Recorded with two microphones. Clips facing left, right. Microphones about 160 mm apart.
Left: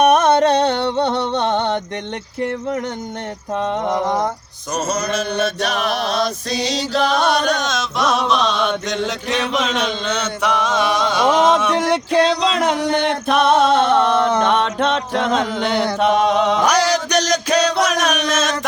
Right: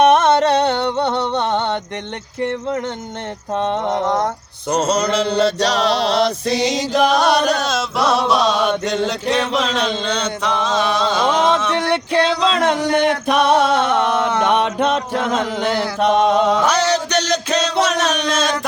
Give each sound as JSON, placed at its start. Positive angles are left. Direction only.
{"t": 0.0, "sound": "music", "side_deg": 15}
{"t": 0.6, "sound": "music", "side_deg": -20}
{"t": 1.4, "sound": "music", "side_deg": 20}
{"t": 3.6, "sound": "chant", "side_deg": -25}
{"t": 6.5, "sound": "chant", "side_deg": -15}
{"t": 12.1, "sound": "music", "side_deg": 5}
{"t": 12.9, "sound": "music", "side_deg": -10}
{"t": 14.3, "sound": "chant", "side_deg": -10}
{"t": 16.6, "sound": "music", "side_deg": 10}
{"t": 17.9, "sound": "a sound", "side_deg": 10}
{"t": 18.3, "sound": "a sound", "side_deg": -30}